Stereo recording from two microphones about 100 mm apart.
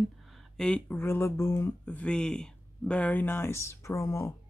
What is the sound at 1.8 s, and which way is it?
Speech, 15° left (ahead or behind).